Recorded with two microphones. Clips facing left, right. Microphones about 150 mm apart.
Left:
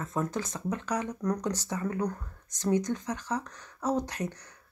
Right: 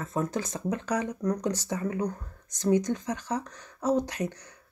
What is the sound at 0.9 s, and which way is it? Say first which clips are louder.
Speech: right 1 dB; 25° right (ahead or behind).